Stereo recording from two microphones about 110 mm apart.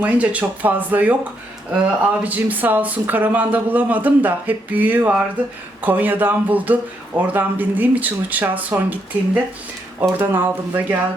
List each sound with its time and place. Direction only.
0.0 s speech: 15° right (ahead or behind)